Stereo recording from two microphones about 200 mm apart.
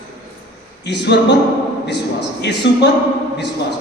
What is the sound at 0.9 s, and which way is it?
Speech, 60° left (ahead or behind).